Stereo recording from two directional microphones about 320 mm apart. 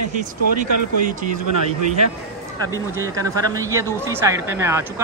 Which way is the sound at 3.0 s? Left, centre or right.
Centre.